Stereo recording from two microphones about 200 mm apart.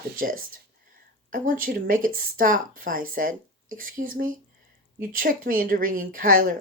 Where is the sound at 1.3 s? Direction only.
45° right (ahead or behind).